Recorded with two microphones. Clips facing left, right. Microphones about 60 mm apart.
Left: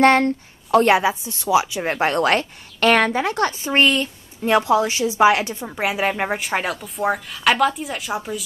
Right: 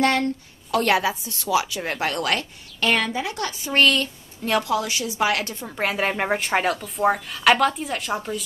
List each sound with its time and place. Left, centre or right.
0.0 s a woman's voice: left
2.8 s a woman's voice: left
3.7 s a woman's voice: left; by 8.5 s centre